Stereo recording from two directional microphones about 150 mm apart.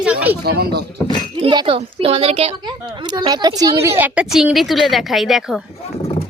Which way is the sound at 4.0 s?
5° right (ahead or behind).